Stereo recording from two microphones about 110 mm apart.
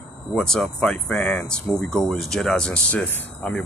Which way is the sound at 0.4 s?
5° left (ahead or behind).